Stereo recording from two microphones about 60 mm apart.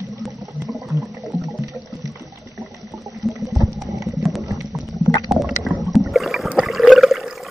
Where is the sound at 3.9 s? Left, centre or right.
Right.